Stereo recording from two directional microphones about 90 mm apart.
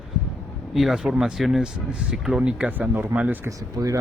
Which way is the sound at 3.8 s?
40° right (ahead or behind).